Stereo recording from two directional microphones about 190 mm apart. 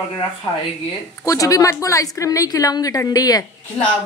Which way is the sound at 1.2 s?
20° left (ahead or behind).